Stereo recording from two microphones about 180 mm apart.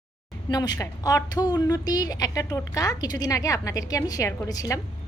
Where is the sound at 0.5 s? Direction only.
20° left (ahead or behind).